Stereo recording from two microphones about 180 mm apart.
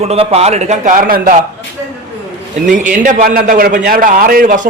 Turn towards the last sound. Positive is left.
turn(degrees=-45)  # may be behind; listen again after turning